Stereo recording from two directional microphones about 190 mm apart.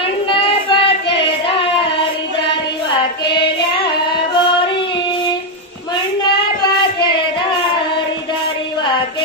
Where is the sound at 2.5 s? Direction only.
25° left (ahead or behind).